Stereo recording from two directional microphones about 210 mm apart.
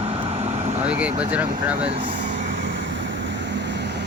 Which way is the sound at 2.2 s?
55° right (ahead or behind).